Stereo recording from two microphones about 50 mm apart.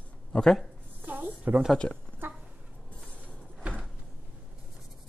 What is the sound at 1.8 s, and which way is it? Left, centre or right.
Speech, left.